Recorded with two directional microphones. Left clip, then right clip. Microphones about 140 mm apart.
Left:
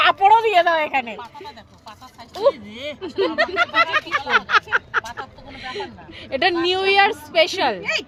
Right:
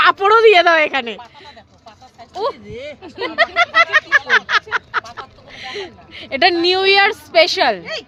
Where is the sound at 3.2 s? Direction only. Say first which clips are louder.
Right 4 dB; 45° right (ahead or behind).